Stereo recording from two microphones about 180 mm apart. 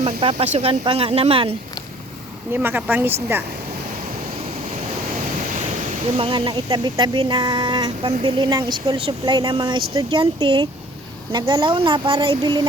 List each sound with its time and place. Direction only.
0.0 s speech: 30° right (ahead or behind)
2.5 s speech: 10° right (ahead or behind)
6.1 s speech: 30° right (ahead or behind)